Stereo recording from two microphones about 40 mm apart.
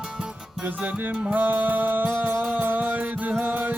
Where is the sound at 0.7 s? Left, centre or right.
Right.